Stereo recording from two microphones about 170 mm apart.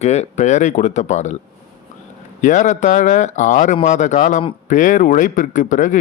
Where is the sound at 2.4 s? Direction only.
45° left (ahead or behind).